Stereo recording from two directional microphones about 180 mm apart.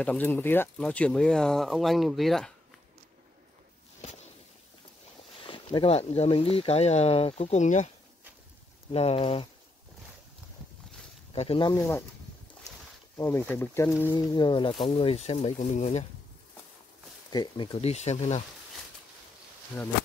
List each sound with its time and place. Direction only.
0.0 s speech: 10° left (ahead or behind)
5.4 s speech: 30° left (ahead or behind)
8.9 s speech: 35° left (ahead or behind)
11.3 s speech: 30° left (ahead or behind)
11.7 s speech: 15° left (ahead or behind)
13.2 s speech: 15° left (ahead or behind)
14.1 s speech: 25° left (ahead or behind)
17.3 s speech: 20° left (ahead or behind); by 18.4 s 35° left (ahead or behind)